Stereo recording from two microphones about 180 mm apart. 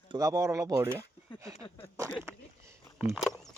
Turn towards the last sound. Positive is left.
turn(degrees=0)  # may be behind; listen again after turning